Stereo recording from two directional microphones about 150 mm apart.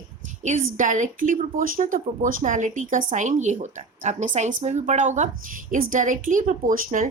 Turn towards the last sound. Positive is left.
turn(degrees=-65)  # may be behind; listen again after turning